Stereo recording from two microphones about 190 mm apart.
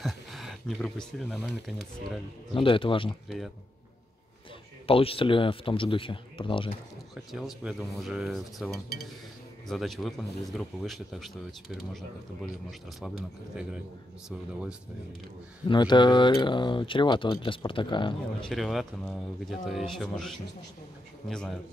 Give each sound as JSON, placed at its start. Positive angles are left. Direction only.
{"t": 0.0, "sound": "speech", "side_deg": 0}
{"t": 2.5, "sound": "speech", "side_deg": 25}
{"t": 4.8, "sound": "speech", "side_deg": 30}
{"t": 7.3, "sound": "speech", "side_deg": 0}
{"t": 13.6, "sound": "speech", "side_deg": -5}
{"t": 15.7, "sound": "speech", "side_deg": 25}
{"t": 18.5, "sound": "speech", "side_deg": 0}